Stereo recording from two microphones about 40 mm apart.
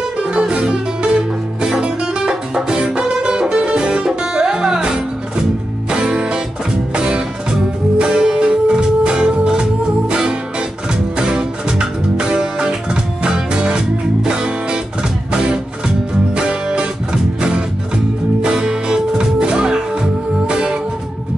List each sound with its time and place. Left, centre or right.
0.2 s music: right
16.3 s music: right